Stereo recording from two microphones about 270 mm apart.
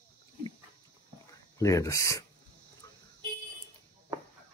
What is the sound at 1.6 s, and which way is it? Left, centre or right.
Speech, centre.